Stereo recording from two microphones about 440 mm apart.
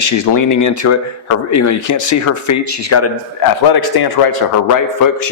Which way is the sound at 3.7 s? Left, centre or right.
Left.